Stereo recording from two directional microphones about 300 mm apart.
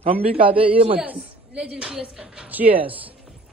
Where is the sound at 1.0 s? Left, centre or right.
Centre.